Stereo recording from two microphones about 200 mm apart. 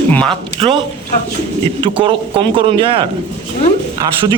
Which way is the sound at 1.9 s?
25° right (ahead or behind).